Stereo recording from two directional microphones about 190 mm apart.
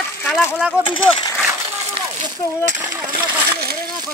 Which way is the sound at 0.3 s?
Centre (ahead or behind).